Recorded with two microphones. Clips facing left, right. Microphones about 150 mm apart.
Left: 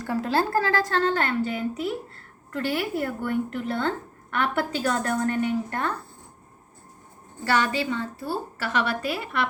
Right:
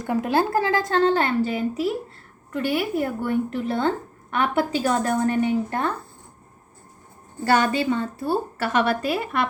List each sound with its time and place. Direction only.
0.0 s speech: 15° right (ahead or behind)
1.4 s speech: 30° right (ahead or behind)
2.5 s speech: 15° right (ahead or behind)
7.5 s a woman's voice: 45° right (ahead or behind)